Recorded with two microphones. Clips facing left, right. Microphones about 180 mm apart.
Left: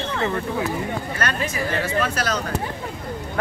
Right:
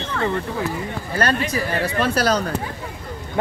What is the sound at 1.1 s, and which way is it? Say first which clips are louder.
Speech: right 4 dB; 35° right (ahead or behind).